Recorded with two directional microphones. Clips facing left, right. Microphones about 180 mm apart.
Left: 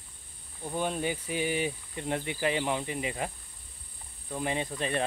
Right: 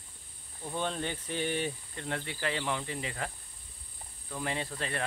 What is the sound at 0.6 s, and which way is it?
Speech, 10° left (ahead or behind).